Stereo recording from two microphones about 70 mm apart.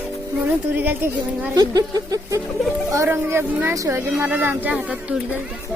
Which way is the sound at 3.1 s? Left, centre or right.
Right.